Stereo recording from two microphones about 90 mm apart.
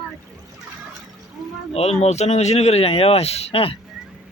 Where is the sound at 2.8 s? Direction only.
90° left.